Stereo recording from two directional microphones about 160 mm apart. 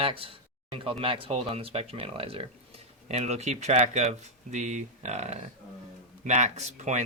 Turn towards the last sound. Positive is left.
turn(degrees=-45)  # may be behind; listen again after turning